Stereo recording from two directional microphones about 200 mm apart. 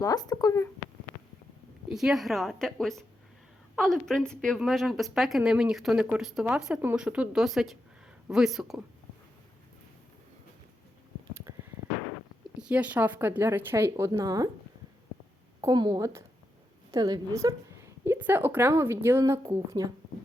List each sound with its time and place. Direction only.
0.0 s speech: 20° left (ahead or behind)
1.9 s a woman's voice: centre (ahead or behind)
12.5 s speech: 5° right (ahead or behind)
15.6 s a woman's voice: 20° right (ahead or behind)